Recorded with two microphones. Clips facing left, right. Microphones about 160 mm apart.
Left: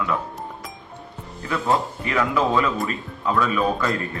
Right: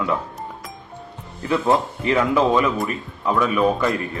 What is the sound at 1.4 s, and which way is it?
A man's voice, 20° right (ahead or behind).